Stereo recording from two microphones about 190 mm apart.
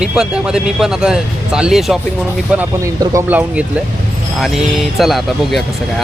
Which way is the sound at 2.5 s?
15° right (ahead or behind).